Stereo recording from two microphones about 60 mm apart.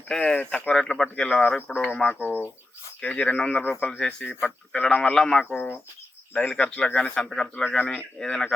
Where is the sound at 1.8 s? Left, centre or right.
Centre.